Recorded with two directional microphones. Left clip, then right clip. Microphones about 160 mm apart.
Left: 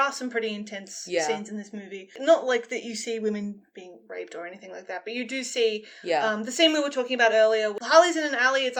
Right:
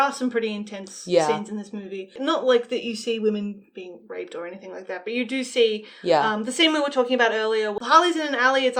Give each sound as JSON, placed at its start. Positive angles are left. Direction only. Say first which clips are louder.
{"t": 0.0, "sound": "speech", "louder": "right 3 dB", "side_deg": 30}
{"t": 1.0, "sound": "speech", "louder": "right 7 dB", "side_deg": -15}
{"t": 2.1, "sound": "speech", "louder": "right 1 dB", "side_deg": 35}
{"t": 4.9, "sound": "a woman's voice", "louder": "right 4 dB", "side_deg": 30}